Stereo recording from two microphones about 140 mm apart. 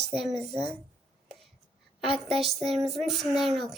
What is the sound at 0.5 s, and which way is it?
Speech, 45° right (ahead or behind).